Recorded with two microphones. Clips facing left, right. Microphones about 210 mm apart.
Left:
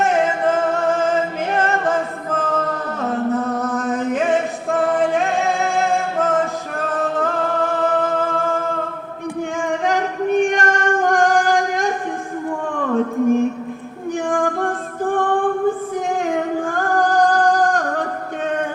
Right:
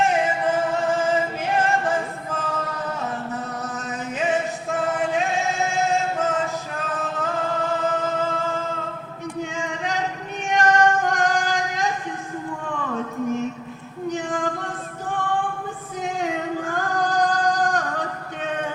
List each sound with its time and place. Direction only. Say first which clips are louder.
0.1 s music: left 4 dB; 60° left (ahead or behind)
9.6 s female singing: left 9 dB; 55° left (ahead or behind)
12.6 s music: left 10 dB; 55° left (ahead or behind)
14.1 s female singing: left 6 dB; 50° left (ahead or behind)
16.2 s singing: left 5 dB; 50° left (ahead or behind)